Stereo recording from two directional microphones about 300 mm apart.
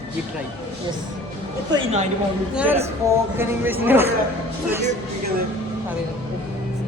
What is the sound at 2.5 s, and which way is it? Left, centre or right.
Speech, centre.